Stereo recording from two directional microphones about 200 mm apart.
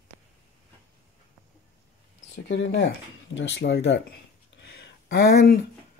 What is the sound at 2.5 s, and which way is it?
Speech, 60° left (ahead or behind).